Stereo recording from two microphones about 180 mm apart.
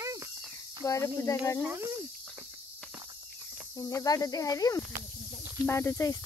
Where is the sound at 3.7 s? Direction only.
20° left (ahead or behind).